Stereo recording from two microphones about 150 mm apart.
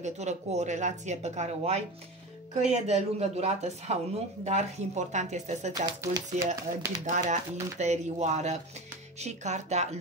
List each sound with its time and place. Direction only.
0.0 s speech: 50° right (ahead or behind)
5.7 s speech: 25° right (ahead or behind)
7.1 s speech: 50° right (ahead or behind)